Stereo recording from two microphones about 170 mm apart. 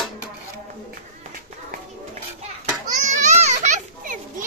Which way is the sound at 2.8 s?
45° right (ahead or behind).